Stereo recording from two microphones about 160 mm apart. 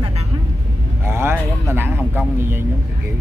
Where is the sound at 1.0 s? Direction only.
15° right (ahead or behind).